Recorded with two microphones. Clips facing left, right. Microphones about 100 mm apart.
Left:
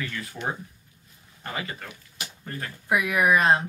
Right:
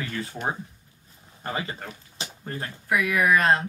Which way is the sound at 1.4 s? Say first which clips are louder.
Right 3 dB; 30° right (ahead or behind).